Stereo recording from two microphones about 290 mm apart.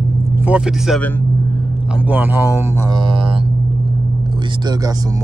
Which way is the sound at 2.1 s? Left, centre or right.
Centre.